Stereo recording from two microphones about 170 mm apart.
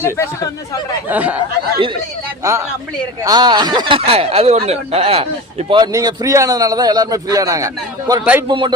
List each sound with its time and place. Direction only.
0.2 s speech: 20° left (ahead or behind)
1.0 s speech: 10° right (ahead or behind)
2.4 s speech: 15° right (ahead or behind)
8.2 s speech: 10° right (ahead or behind)
8.4 s speech: 25° right (ahead or behind)